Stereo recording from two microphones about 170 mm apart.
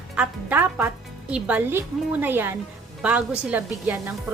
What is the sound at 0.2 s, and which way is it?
A woman's voice, 10° right (ahead or behind).